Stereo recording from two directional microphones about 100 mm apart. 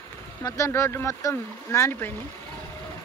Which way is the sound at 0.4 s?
30° left (ahead or behind).